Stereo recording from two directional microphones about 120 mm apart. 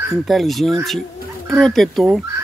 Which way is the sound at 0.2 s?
Centre (ahead or behind).